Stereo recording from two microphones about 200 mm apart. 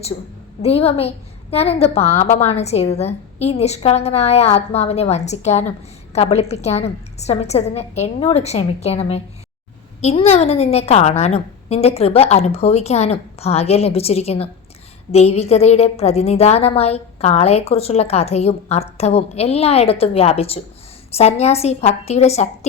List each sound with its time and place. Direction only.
0.6 s a woman's voice: 30° left (ahead or behind)